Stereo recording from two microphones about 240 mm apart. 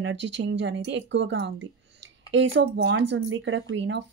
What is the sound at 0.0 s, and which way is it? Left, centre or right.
Speech, right.